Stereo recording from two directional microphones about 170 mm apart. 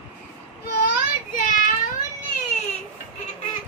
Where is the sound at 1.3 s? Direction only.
50° left (ahead or behind).